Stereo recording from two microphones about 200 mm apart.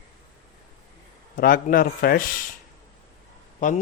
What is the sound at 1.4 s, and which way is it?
Speech, 45° left (ahead or behind).